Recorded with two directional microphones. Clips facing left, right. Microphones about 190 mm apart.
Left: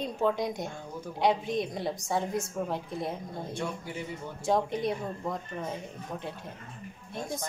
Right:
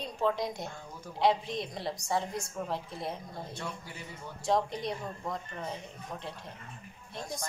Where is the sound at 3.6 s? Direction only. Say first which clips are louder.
Left 6 dB; 20° left (ahead or behind).